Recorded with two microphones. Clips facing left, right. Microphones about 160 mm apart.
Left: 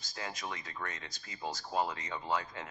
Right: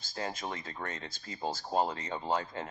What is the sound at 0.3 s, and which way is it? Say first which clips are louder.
Speech: right 3 dB; 30° right (ahead or behind).